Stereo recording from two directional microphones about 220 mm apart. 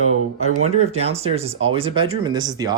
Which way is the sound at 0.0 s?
75° right (ahead or behind).